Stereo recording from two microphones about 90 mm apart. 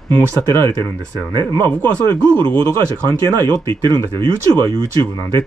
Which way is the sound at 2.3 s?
20° left (ahead or behind).